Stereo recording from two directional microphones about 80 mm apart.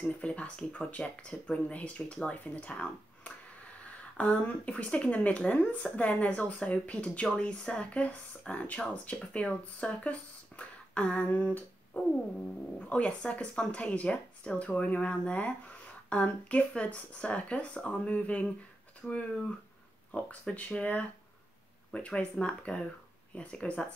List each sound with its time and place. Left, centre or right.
0.0 s speech: centre
19.0 s speech: centre